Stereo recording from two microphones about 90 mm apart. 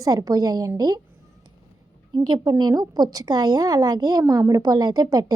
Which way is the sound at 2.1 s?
55° right (ahead or behind).